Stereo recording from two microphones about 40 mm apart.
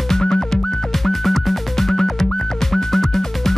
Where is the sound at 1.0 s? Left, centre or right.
Centre.